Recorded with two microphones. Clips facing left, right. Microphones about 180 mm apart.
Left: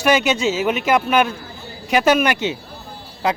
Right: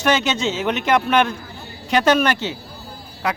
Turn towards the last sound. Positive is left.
turn(degrees=25)  # may be behind; listen again after turning